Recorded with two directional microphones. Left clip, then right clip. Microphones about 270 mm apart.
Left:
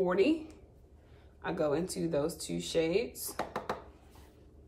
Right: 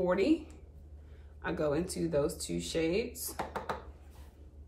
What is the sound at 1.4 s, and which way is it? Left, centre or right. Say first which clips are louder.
Speech: left 1 dB; centre.